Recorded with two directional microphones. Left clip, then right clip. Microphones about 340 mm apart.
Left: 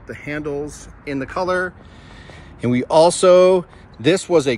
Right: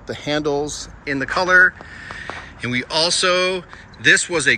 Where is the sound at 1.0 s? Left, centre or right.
Centre.